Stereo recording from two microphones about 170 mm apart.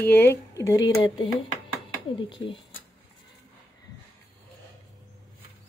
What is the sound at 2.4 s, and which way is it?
Speech, 90° left.